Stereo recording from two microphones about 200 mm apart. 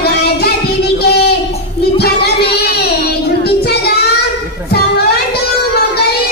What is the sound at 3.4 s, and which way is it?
Child singing, 55° left (ahead or behind).